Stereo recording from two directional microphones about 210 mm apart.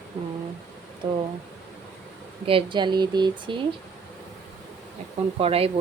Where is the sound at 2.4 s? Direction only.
25° right (ahead or behind).